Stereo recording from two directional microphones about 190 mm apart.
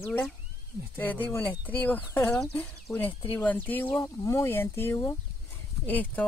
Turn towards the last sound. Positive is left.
turn(degrees=10)  # may be behind; listen again after turning